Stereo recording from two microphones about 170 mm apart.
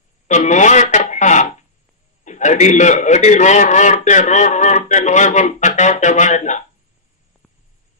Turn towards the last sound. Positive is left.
turn(degrees=45)  # may be behind; listen again after turning